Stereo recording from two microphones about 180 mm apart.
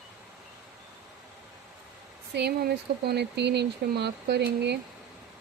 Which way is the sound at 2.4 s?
65° right (ahead or behind).